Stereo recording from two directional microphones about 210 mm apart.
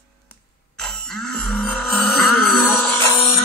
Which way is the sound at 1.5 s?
5° left (ahead or behind).